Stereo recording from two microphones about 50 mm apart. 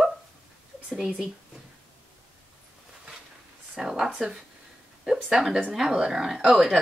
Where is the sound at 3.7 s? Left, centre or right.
Centre.